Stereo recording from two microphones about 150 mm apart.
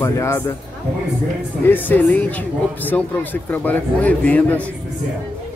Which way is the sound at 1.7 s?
10° left (ahead or behind).